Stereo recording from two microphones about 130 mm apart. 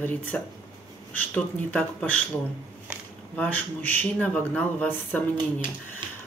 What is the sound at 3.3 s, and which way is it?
Speech, 10° left (ahead or behind).